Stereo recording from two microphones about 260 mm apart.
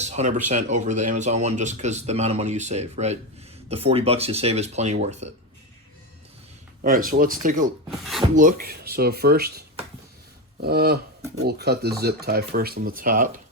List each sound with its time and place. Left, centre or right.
0.0 s speech: right
6.8 s speech: right
7.9 s speech: centre
8.4 s speech: right